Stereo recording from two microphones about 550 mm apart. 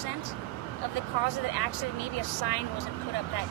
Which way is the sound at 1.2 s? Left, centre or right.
Right.